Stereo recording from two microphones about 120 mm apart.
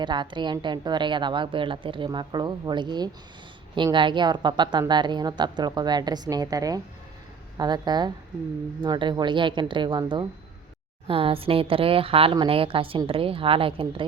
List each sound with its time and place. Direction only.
0.0 s a woman's voice: 40° right (ahead or behind)
11.1 s a woman's voice: 50° right (ahead or behind)